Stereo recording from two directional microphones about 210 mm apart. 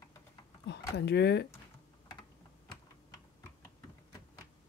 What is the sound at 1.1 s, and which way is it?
Speech, 55° left (ahead or behind).